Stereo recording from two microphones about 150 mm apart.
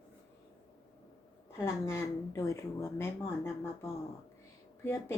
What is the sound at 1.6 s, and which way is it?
A woman's voice, 20° left (ahead or behind).